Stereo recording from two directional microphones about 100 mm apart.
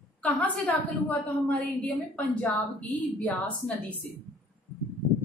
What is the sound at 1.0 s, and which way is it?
A woman's voice, 15° left (ahead or behind).